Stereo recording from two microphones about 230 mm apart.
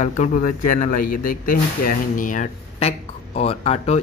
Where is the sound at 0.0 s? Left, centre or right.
Left.